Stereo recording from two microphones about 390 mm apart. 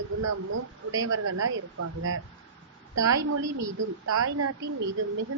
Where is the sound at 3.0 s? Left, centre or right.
Right.